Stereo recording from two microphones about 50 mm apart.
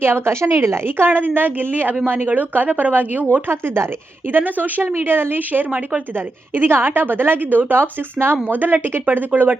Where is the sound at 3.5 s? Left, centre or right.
Right.